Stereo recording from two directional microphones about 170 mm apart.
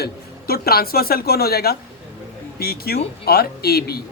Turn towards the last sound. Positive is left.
turn(degrees=65)  # may be behind; listen again after turning